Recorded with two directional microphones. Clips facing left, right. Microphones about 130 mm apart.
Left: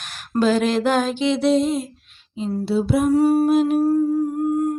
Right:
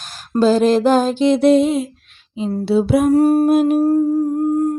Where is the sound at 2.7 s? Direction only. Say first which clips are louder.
Right 5 dB; 75° right (ahead or behind).